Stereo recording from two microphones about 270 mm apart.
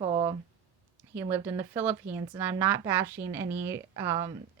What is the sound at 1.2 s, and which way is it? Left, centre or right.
Speech, centre.